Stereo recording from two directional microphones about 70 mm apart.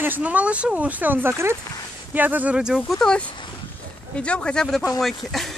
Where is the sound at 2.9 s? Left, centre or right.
Centre.